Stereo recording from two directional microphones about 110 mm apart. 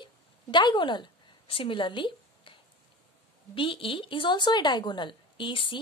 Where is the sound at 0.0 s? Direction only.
45° left (ahead or behind).